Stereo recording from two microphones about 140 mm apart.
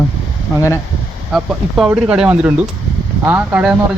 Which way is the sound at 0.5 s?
20° left (ahead or behind).